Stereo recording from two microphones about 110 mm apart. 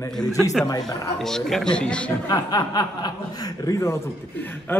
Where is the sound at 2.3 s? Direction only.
35° left (ahead or behind).